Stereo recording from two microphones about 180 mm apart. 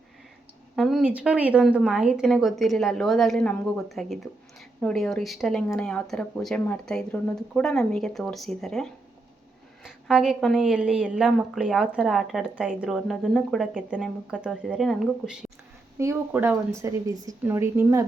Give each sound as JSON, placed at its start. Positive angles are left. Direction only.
{"t": 0.8, "sound": "a woman's voice", "side_deg": 0}
{"t": 16.0, "sound": "a woman's voice", "side_deg": -15}